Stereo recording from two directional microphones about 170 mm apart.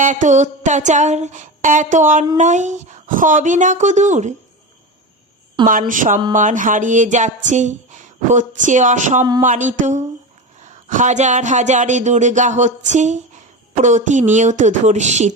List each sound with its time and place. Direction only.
0.0 s speech: 50° right (ahead or behind)
5.9 s speech: 50° right (ahead or behind)